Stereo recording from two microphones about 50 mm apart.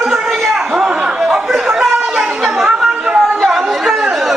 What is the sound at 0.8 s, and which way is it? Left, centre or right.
Chatter, centre.